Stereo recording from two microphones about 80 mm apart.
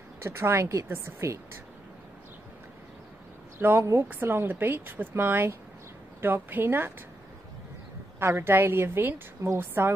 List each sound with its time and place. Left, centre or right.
0.2 s a woman's voice: right
3.5 s a woman's voice: right
8.2 s a woman's voice: right